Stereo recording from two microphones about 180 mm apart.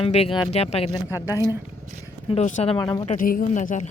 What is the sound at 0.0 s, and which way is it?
Speech, 30° left (ahead or behind).